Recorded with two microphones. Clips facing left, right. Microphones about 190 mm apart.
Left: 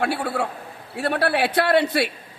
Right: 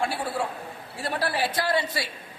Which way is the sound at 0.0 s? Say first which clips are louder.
Left 4 dB; 60° left (ahead or behind).